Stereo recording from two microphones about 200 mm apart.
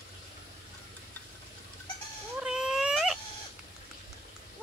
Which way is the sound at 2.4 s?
5° right (ahead or behind).